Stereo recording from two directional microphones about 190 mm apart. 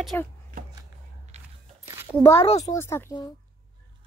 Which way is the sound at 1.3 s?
35° right (ahead or behind).